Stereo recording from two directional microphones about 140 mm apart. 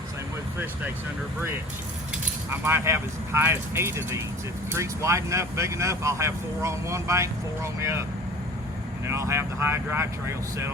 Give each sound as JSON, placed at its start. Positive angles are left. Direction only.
{"t": 2.5, "sound": "speech", "side_deg": -15}
{"t": 9.0, "sound": "speech", "side_deg": -20}